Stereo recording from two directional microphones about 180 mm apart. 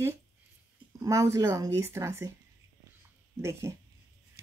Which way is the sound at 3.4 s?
15° right (ahead or behind).